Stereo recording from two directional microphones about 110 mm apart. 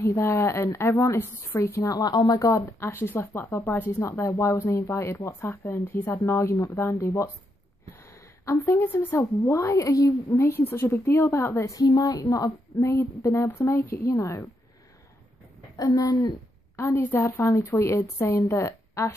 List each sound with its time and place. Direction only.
0.0 s a woman's voice: 25° left (ahead or behind)
15.7 s a woman's voice: 35° left (ahead or behind)